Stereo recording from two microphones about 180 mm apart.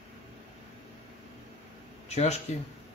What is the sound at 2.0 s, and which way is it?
Speech, 40° left (ahead or behind).